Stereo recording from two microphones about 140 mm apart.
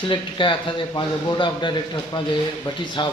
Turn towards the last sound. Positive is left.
turn(degrees=35)  # may be behind; listen again after turning